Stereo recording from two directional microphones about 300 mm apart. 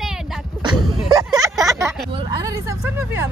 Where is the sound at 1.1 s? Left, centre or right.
Centre.